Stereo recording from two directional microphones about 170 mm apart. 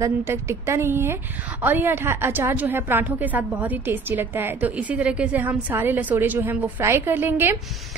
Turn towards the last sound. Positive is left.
turn(degrees=-15)  # may be behind; listen again after turning